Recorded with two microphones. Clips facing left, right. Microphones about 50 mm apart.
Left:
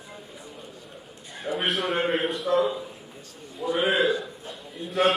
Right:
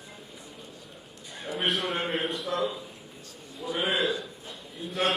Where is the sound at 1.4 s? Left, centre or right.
Centre.